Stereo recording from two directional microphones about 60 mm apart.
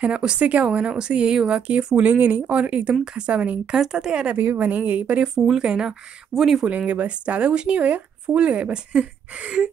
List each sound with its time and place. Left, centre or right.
0.0 s speech: centre
4.4 s speech: right
5.2 s speech: centre
6.9 s speech: right